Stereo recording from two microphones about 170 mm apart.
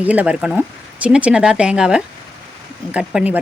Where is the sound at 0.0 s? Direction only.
10° right (ahead or behind).